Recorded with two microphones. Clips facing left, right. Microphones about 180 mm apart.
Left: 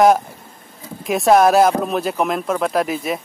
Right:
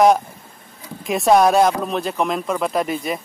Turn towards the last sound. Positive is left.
turn(degrees=0)  # may be behind; listen again after turning